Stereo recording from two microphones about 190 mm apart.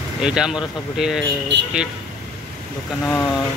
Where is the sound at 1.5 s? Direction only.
65° right (ahead or behind).